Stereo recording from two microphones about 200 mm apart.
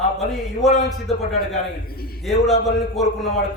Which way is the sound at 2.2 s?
Centre (ahead or behind).